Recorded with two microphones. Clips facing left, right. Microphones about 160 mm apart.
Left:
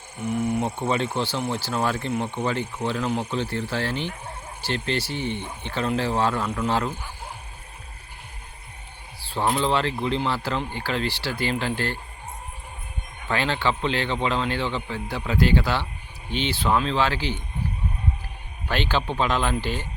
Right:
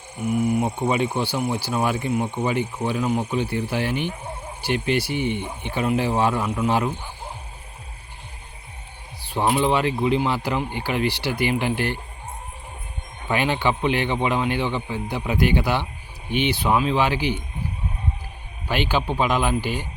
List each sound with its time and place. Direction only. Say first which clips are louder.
0.2 s speech: right 3 dB; 5° right (ahead or behind)
9.2 s speech: right 3 dB; 15° right (ahead or behind)
13.2 s speech: right 2 dB; 15° right (ahead or behind)
18.7 s speech: right 2 dB; 10° right (ahead or behind)